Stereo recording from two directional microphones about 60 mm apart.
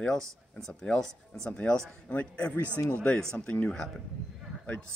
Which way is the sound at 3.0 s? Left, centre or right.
Centre.